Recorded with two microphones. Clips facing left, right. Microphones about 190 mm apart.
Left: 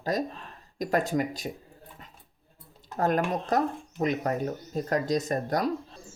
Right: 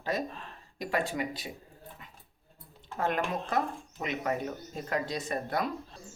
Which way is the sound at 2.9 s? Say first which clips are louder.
Left 5 dB; 40° left (ahead or behind).